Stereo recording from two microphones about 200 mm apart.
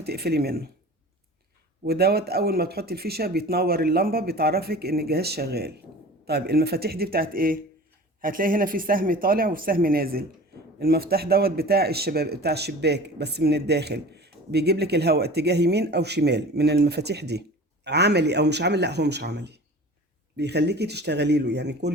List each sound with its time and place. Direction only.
0.0 s speech: 55° right (ahead or behind)
1.8 s speech: 50° right (ahead or behind)